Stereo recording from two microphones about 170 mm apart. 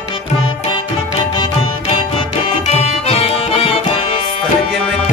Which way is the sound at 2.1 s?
40° left (ahead or behind).